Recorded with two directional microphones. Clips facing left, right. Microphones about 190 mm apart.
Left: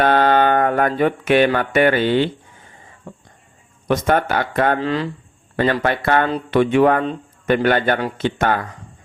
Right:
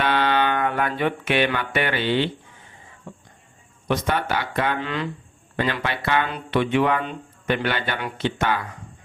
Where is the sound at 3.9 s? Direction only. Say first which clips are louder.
Left 6 dB; 50° left (ahead or behind).